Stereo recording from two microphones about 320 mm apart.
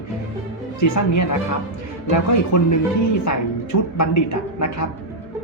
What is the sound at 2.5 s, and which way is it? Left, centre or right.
A woman's voice, left.